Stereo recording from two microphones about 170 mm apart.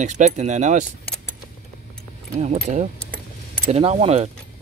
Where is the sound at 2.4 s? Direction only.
45° right (ahead or behind).